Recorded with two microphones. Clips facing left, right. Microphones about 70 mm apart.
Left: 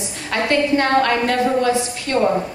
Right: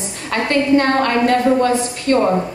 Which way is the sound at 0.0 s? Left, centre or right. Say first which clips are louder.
Right 1 dB; right.